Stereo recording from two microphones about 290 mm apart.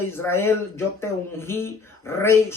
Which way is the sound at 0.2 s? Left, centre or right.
Centre.